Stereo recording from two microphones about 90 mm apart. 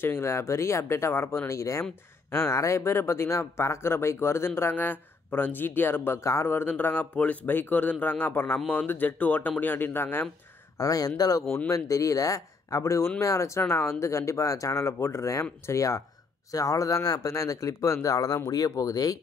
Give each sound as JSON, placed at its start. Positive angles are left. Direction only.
{"t": 0.0, "sound": "speech", "side_deg": 25}
{"t": 10.8, "sound": "speech", "side_deg": 40}